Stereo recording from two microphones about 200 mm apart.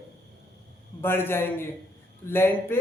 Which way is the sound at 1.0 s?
10° left (ahead or behind).